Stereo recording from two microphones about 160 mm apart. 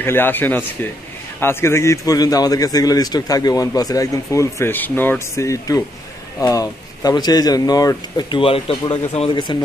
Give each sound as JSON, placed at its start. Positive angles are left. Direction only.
{"t": 0.0, "sound": "a man's voice", "side_deg": 15}